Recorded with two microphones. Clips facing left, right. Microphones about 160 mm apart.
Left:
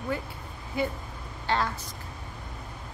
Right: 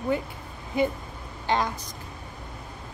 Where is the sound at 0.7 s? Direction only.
20° right (ahead or behind).